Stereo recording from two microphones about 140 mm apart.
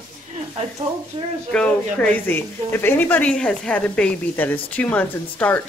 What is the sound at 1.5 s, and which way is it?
Speech, 10° left (ahead or behind).